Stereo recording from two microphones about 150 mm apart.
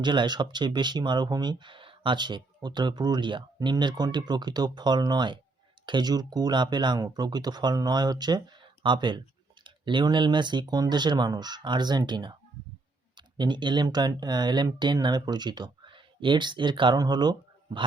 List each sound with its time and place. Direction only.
0.0 s speech: 30° right (ahead or behind)